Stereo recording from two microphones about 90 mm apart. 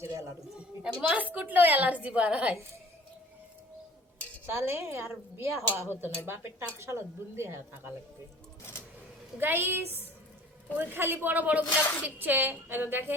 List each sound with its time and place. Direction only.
0.0 s a sound: 35° right (ahead or behind)
0.8 s a woman's voice: 15° right (ahead or behind)
4.4 s a woman's voice: 30° right (ahead or behind)
9.4 s a woman's voice: 25° right (ahead or behind)